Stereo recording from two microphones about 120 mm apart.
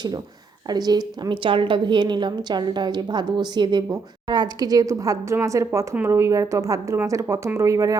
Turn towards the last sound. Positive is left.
turn(degrees=-25)  # may be behind; listen again after turning